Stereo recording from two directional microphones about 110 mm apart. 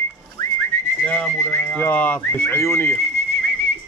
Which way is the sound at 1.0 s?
10° left (ahead or behind).